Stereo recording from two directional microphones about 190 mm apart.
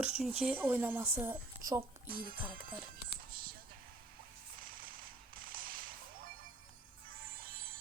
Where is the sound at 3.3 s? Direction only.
50° right (ahead or behind).